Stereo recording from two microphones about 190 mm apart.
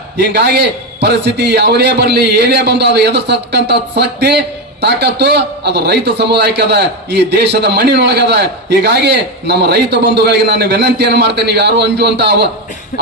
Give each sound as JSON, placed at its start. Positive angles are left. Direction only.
{"t": 0.2, "sound": "a man's voice", "side_deg": -60}